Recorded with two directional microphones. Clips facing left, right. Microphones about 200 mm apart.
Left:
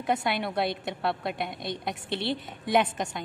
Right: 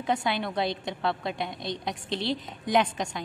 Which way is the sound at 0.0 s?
5° left (ahead or behind).